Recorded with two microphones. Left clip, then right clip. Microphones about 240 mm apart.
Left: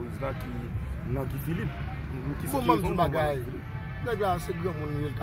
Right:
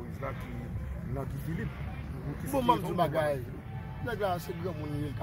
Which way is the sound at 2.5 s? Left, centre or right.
Centre.